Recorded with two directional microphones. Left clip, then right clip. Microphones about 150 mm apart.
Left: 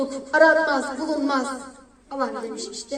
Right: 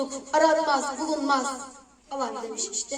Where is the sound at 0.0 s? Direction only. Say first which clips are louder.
Left 5 dB; 15° left (ahead or behind).